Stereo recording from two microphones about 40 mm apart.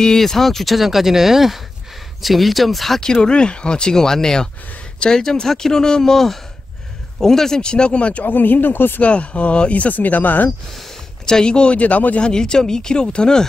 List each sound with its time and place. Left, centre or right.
0.0 s speech: centre
3.0 s speech: left
7.2 s speech: centre
7.6 s speech: left
8.3 s speech: left
9.0 s speech: left
11.2 s speech: centre; by 12.2 s left
12.2 s speech: left